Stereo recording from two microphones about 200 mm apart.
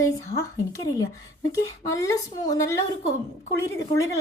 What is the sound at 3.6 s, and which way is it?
Speech, 15° left (ahead or behind).